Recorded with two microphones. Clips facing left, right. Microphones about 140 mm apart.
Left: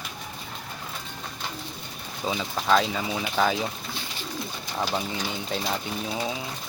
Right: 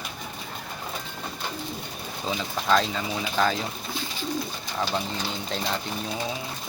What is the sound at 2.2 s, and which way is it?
Speech, 5° left (ahead or behind).